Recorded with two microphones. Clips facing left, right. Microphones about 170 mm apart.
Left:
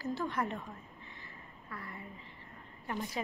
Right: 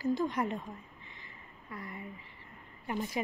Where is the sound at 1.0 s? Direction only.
15° right (ahead or behind).